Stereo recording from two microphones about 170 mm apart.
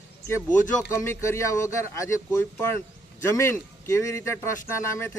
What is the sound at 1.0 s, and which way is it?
Speech, 15° left (ahead or behind).